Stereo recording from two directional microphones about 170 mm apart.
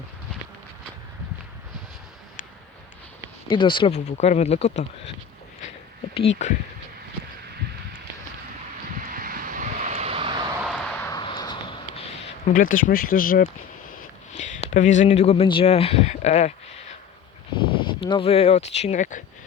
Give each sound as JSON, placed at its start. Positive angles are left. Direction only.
{"t": 3.5, "sound": "speech", "side_deg": 30}
{"t": 3.9, "sound": "speech", "side_deg": 45}
{"t": 6.1, "sound": "speech", "side_deg": 40}
{"t": 9.0, "sound": "vehicle", "side_deg": -55}
{"t": 10.6, "sound": "vehicle", "side_deg": 0}
{"t": 11.2, "sound": "a sound", "side_deg": 25}
{"t": 12.5, "sound": "speech", "side_deg": 55}
{"t": 14.3, "sound": "speech", "side_deg": 45}
{"t": 17.5, "sound": "speech", "side_deg": 30}